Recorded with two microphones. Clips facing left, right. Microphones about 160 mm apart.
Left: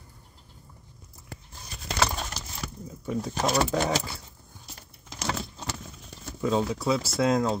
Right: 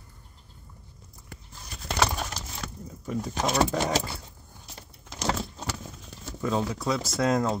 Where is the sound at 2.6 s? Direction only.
5° left (ahead or behind).